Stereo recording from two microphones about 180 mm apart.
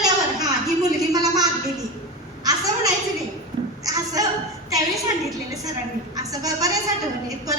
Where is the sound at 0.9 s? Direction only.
20° right (ahead or behind).